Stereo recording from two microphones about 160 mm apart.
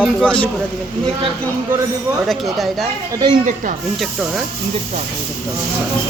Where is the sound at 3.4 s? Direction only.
55° right (ahead or behind).